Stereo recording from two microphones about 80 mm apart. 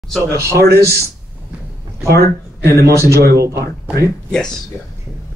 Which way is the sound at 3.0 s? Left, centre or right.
Right.